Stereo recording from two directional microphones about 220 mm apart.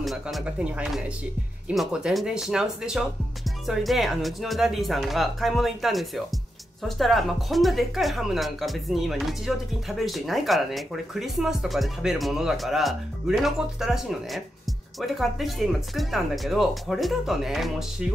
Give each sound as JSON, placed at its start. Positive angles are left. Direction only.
{"t": 0.0, "sound": "speech", "side_deg": 0}